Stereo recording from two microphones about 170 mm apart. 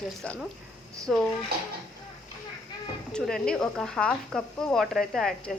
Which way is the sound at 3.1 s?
5° left (ahead or behind).